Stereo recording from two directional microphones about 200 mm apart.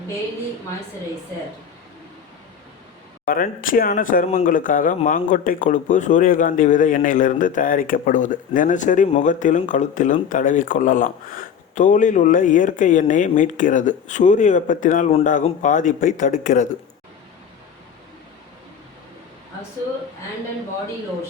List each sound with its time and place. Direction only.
3.2 s speech: 45° left (ahead or behind)